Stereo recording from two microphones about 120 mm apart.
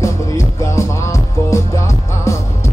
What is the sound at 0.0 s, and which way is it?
Music, 25° left (ahead or behind).